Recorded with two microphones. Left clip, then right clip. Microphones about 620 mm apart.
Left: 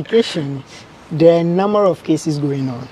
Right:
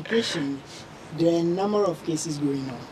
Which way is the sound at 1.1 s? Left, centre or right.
Left.